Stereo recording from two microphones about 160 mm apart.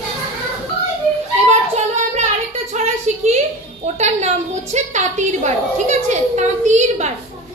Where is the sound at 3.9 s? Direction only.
45° right (ahead or behind).